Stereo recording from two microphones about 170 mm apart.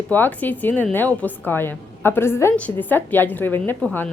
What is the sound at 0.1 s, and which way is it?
A woman's voice, 10° left (ahead or behind).